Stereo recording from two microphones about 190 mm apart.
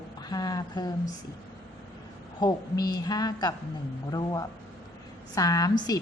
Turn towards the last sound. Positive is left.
turn(degrees=20)  # may be behind; listen again after turning